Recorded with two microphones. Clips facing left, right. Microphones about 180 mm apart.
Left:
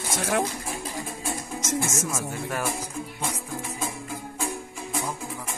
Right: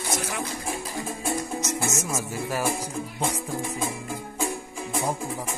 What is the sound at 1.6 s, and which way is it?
Music, 90° left.